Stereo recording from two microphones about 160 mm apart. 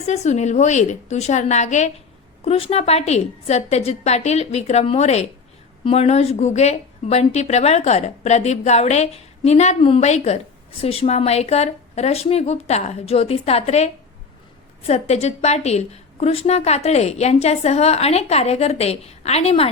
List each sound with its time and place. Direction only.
0.0 s a woman's voice: 45° left (ahead or behind)